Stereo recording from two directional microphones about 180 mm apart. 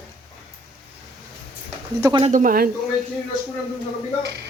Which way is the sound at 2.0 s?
25° right (ahead or behind).